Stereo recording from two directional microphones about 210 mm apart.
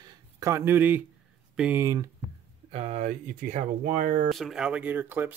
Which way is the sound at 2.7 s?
30° right (ahead or behind).